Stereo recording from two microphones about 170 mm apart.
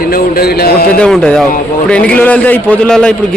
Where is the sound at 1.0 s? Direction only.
5° left (ahead or behind).